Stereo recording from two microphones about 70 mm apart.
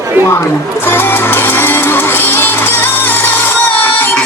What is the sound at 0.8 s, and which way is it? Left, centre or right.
Music, left.